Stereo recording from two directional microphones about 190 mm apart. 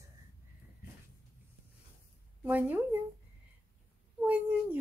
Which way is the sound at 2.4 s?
10° right (ahead or behind).